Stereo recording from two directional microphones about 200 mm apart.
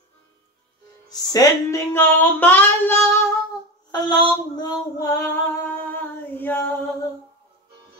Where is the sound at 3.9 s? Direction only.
20° left (ahead or behind).